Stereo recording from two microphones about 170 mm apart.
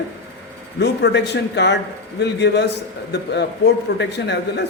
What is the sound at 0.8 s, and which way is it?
Speech, 85° left.